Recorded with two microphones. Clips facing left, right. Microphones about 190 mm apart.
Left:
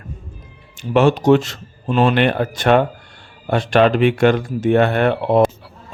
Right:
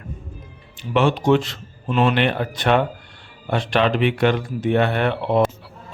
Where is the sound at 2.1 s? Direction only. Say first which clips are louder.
Left 4 dB; 45° left (ahead or behind).